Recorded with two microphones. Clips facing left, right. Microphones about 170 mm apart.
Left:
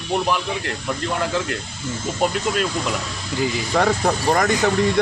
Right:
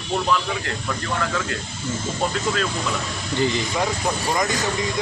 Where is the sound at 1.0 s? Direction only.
25° left (ahead or behind).